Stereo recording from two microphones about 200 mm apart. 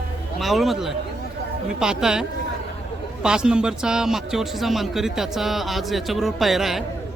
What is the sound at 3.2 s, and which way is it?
A man's voice, 5° right (ahead or behind).